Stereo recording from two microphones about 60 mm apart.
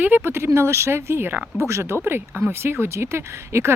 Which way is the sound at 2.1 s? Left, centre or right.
Right.